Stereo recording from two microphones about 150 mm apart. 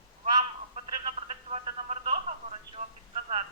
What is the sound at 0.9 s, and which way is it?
Telephone, 35° right (ahead or behind).